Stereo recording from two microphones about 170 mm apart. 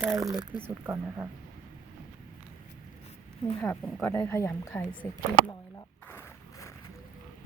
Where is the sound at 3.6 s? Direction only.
5° left (ahead or behind).